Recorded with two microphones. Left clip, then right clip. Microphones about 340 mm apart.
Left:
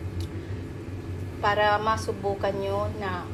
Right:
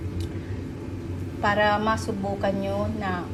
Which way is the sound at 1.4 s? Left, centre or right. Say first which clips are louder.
Right 1 dB; centre.